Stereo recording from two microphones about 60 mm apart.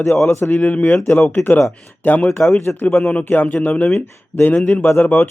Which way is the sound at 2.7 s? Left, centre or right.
Left.